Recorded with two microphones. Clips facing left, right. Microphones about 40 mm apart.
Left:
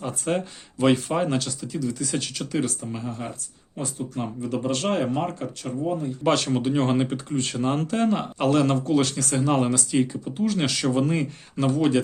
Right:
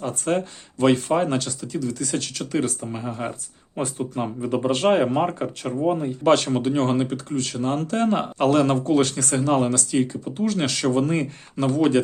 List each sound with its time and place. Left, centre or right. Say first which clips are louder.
0.0 s speech: right 3 dB; centre
2.9 s speech: right 3 dB; centre
3.8 s speech: right 5 dB; right
4.1 s speech: right 3 dB; right
5.6 s speech: right 4 dB; right
6.2 s speech: right 4 dB; centre
7.1 s speech: right 1 dB; left
7.9 s speech: right 2 dB; centre